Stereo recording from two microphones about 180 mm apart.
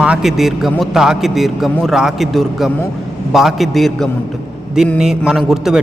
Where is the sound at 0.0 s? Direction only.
5° right (ahead or behind).